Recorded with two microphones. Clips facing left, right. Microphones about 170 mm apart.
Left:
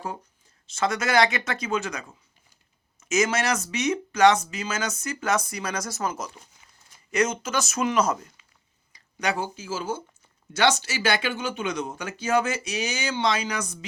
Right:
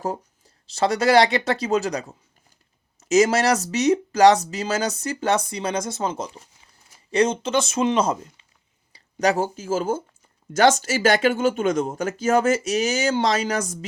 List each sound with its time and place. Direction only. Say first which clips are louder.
0.0 s speech: right 6 dB; 40° right (ahead or behind)
9.1 s speech: right 7 dB; 40° right (ahead or behind)